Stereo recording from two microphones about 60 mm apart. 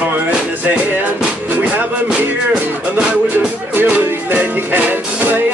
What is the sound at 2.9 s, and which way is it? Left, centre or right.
Music, centre.